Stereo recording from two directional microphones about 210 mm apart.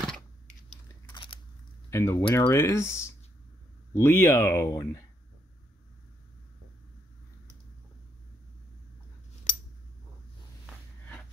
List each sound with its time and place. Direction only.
1.1 s biting: 25° left (ahead or behind)
1.9 s speech: 15° left (ahead or behind)